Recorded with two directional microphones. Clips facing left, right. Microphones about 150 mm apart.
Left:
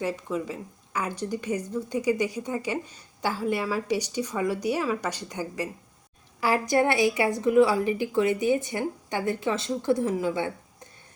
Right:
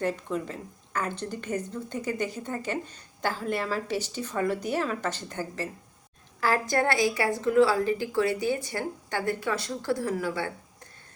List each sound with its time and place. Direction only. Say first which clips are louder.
0.0 s a woman's voice: even; 5° left (ahead or behind)